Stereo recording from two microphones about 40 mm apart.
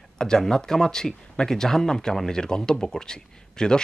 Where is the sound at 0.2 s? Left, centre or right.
Centre.